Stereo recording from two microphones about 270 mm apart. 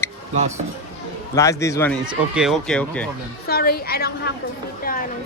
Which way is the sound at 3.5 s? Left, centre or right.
Left.